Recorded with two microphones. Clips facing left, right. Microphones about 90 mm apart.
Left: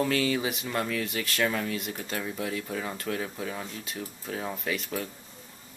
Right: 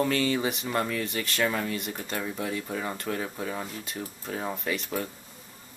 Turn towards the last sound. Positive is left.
turn(degrees=0)  # may be behind; listen again after turning